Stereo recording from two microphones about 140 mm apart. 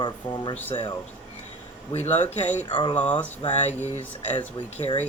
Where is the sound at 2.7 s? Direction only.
35° left (ahead or behind).